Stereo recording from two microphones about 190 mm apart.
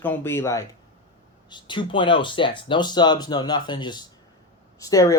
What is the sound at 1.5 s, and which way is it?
Speech, 25° left (ahead or behind).